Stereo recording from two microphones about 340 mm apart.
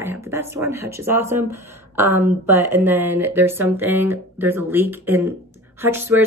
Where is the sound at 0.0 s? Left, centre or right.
Centre.